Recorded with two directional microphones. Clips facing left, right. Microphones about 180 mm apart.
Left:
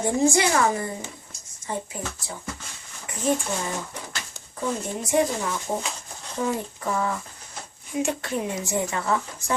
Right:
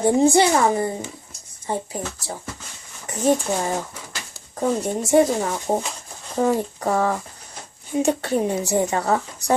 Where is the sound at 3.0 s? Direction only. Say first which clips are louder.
Right 5 dB; 40° right (ahead or behind).